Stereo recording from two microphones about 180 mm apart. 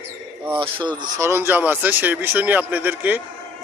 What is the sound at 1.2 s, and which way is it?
A man's voice, 15° right (ahead or behind).